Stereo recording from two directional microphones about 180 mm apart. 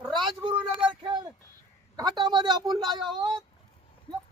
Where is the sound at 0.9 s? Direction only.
25° right (ahead or behind).